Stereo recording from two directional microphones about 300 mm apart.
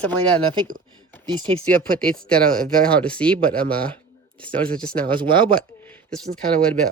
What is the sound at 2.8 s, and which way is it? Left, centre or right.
Speech, centre.